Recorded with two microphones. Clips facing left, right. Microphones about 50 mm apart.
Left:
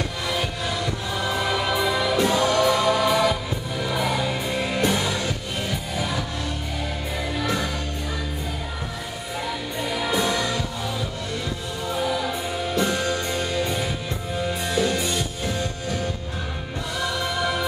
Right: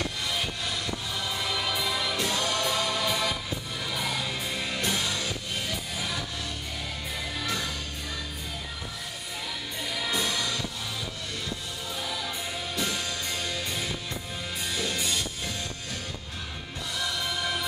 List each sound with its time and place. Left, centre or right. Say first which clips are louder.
0.3 s music: left 5 dB; centre
7.3 s music: left 7 dB; centre
9.8 s music: left 6 dB; centre
11.9 s music: left 10 dB; centre
17.0 s music: left 6 dB; centre